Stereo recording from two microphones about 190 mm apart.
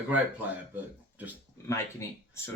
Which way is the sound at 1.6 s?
15° left (ahead or behind).